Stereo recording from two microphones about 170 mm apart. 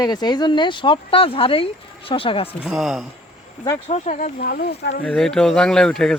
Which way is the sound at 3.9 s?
45° left (ahead or behind).